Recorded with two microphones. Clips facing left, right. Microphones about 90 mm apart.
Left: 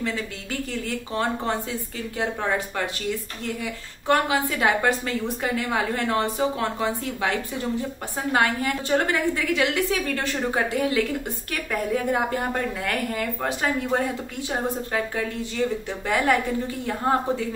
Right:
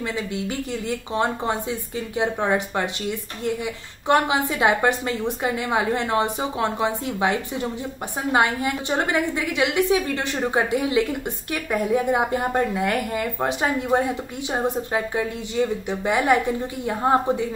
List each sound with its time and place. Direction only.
0.0 s a woman's voice: 20° right (ahead or behind)